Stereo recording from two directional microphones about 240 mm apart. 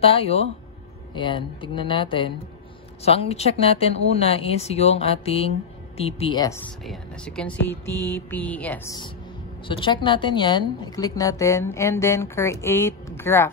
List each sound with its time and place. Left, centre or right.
0.0 s speech: left
6.8 s speech: centre